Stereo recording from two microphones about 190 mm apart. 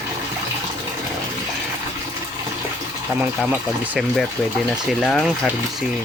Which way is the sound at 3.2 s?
5° right (ahead or behind).